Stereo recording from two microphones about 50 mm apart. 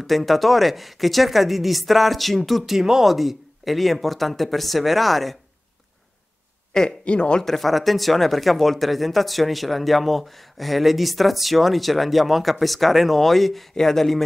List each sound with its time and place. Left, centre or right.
0.0 s speech: centre
6.7 s speech: centre
7.4 s speech: centre